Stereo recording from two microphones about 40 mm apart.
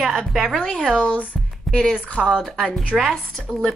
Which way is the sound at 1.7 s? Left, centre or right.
Centre.